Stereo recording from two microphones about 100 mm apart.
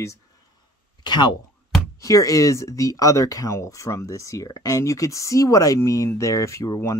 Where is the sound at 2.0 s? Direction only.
35° left (ahead or behind).